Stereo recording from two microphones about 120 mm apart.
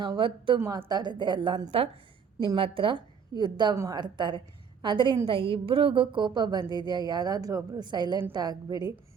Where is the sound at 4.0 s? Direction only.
40° right (ahead or behind).